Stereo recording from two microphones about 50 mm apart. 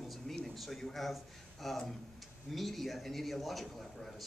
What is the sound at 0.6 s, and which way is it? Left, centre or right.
A man's voice, centre.